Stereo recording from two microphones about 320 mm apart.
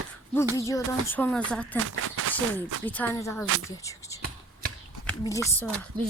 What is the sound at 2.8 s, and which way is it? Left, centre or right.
Speech, centre.